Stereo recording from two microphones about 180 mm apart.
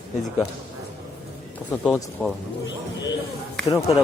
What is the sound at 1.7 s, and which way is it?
Speech, 5° left (ahead or behind).